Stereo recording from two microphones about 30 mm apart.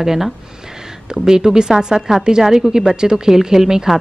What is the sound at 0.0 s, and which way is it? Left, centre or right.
A woman's voice, centre.